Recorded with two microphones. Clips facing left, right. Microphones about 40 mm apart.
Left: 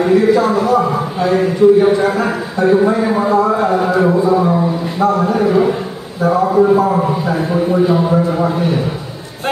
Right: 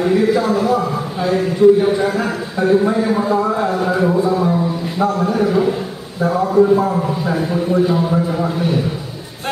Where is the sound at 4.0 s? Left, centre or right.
Centre.